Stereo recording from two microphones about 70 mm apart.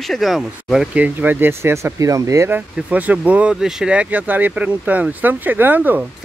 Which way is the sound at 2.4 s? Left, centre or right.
Right.